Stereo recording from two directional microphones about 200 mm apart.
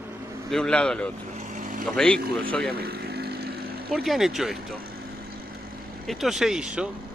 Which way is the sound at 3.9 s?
Centre (ahead or behind).